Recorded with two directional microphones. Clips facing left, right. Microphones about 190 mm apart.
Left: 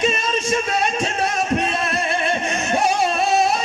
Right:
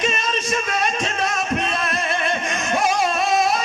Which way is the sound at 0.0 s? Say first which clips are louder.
Left 3 dB; 30° left (ahead or behind).